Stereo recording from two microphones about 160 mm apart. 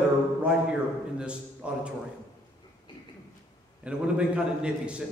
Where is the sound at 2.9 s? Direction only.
30° left (ahead or behind).